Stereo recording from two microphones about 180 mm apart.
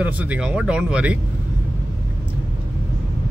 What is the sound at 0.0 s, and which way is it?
Speech, 10° right (ahead or behind).